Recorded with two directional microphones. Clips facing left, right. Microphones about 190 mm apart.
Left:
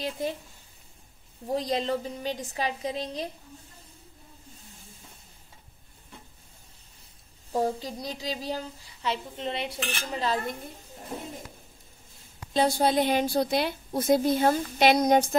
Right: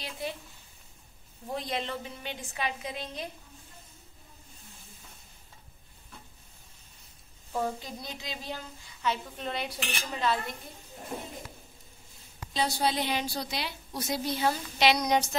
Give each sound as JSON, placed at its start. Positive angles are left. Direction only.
{"t": 0.2, "sound": "a woman's voice", "side_deg": 45}
{"t": 1.5, "sound": "speech", "side_deg": 35}
{"t": 7.5, "sound": "speech", "side_deg": 35}
{"t": 10.1, "sound": "speech", "side_deg": 35}
{"t": 12.5, "sound": "a woman's voice", "side_deg": 50}